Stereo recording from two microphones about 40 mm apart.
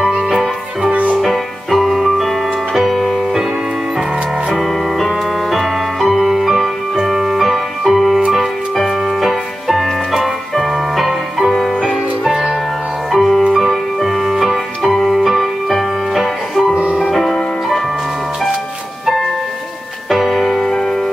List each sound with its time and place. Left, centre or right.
0.3 s music: centre
4.5 s music: centre
11.8 s music: centre
13.1 s music: centre
20.1 s music: centre
20.6 s music: centre